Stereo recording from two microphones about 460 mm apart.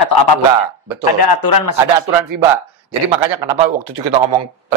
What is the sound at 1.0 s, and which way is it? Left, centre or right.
Speech, left.